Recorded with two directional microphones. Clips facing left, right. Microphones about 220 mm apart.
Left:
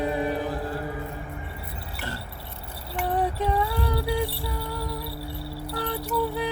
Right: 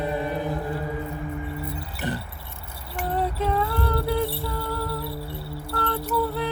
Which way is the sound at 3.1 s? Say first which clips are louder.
Even; 15° left (ahead or behind).